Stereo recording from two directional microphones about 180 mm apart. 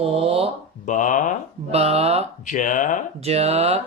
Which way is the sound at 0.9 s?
45° left (ahead or behind).